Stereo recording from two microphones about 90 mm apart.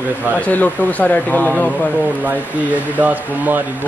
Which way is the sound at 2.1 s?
20° right (ahead or behind).